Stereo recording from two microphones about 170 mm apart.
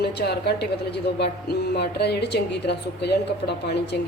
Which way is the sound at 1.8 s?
70° left (ahead or behind).